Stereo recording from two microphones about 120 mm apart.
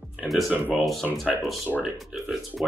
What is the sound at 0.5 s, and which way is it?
Speech, 15° right (ahead or behind).